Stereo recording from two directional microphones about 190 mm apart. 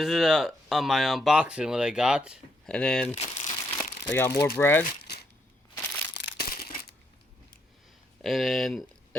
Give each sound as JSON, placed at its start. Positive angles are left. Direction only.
{"t": 0.0, "sound": "speech", "side_deg": 0}
{"t": 3.2, "sound": "crumpling", "side_deg": 35}
{"t": 4.0, "sound": "speech", "side_deg": 15}
{"t": 5.0, "sound": "a sound", "side_deg": 60}
{"t": 8.2, "sound": "speech", "side_deg": 0}